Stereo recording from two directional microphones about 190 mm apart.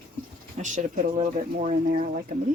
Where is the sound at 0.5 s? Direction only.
40° right (ahead or behind).